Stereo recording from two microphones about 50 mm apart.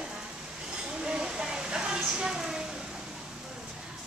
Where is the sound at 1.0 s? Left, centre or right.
Centre.